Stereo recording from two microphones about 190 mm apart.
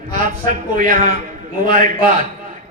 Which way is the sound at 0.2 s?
45° right (ahead or behind).